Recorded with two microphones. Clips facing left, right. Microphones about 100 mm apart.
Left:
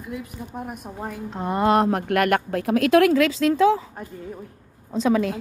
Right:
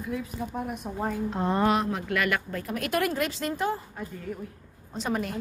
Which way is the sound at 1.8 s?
60° left (ahead or behind).